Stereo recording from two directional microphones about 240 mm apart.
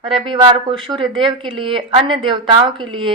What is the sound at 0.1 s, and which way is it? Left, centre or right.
A woman's voice, right.